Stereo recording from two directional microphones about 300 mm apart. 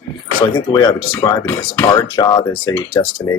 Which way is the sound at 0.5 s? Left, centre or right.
Centre.